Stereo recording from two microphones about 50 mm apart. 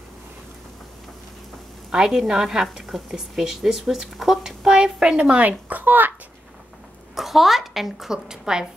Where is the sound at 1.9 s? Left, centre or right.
Centre.